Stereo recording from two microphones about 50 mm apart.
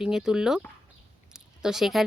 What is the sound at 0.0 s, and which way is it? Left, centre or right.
Speech, centre.